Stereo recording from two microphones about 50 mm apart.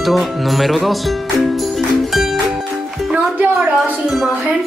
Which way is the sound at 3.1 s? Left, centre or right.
Right.